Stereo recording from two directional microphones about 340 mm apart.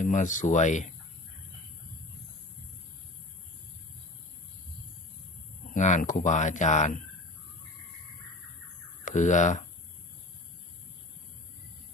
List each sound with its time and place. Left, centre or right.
0.0 s speech: left
5.7 s speech: left
9.0 s speech: left